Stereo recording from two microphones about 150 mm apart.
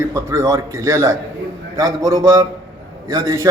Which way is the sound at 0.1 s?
20° right (ahead or behind).